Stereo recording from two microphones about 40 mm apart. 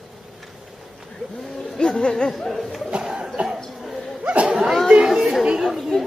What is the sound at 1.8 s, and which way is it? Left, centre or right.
Speech, left.